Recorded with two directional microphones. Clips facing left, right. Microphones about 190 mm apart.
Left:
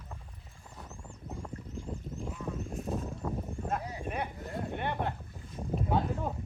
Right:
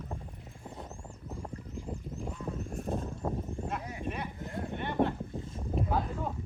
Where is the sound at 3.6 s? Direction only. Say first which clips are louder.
Left 1 dB; 50° left (ahead or behind).